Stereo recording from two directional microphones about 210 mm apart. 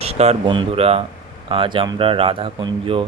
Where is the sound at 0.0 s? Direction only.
30° right (ahead or behind).